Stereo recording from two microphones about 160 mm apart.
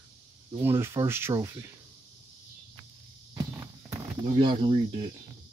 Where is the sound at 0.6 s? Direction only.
15° right (ahead or behind).